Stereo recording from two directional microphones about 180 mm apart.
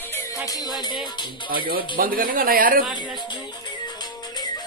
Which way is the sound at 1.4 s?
55° right (ahead or behind).